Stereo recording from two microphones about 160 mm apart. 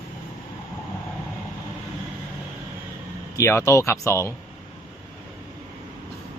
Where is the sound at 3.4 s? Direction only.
20° left (ahead or behind).